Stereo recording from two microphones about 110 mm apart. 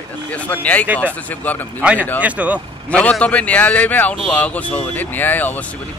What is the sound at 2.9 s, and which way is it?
A man's voice, 10° left (ahead or behind).